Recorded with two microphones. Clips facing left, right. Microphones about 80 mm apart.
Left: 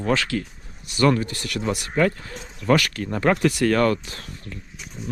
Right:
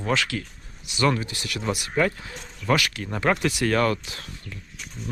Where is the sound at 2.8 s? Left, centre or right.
Left.